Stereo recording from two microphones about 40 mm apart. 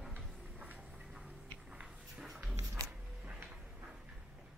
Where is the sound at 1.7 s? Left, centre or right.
Centre.